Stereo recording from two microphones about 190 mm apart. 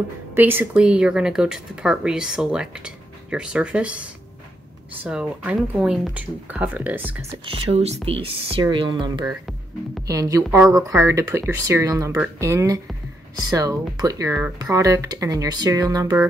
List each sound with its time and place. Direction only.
0.3 s speech: 10° right (ahead or behind)
7.7 s speech: 35° right (ahead or behind)